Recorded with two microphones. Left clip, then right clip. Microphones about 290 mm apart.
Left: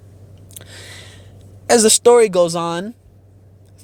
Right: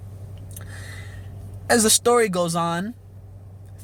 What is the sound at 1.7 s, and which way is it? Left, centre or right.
Speech, left.